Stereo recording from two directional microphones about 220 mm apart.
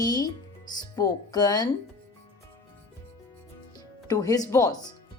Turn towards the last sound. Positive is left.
turn(degrees=15)  # may be behind; listen again after turning